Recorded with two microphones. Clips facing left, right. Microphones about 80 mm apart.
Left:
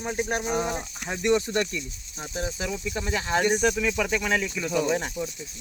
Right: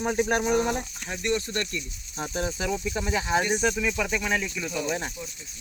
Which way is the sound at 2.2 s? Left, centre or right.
Right.